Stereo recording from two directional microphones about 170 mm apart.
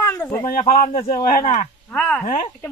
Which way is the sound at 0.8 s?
40° left (ahead or behind).